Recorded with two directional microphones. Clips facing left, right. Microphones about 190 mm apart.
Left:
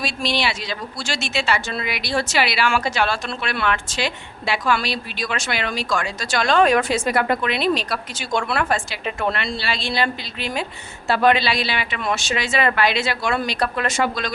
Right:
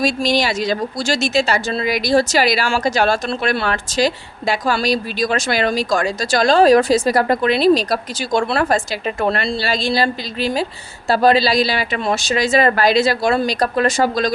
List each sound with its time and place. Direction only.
0.0 s speech: 40° right (ahead or behind)